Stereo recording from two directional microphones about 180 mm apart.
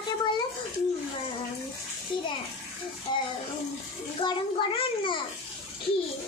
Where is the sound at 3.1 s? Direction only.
25° left (ahead or behind).